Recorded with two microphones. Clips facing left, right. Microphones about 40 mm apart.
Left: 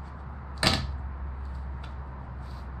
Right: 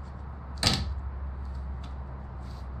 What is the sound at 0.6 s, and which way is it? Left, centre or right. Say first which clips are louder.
Typewriter: left 3 dB; centre.